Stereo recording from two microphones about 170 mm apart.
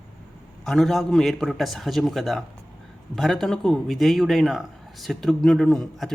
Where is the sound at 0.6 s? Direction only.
Centre (ahead or behind).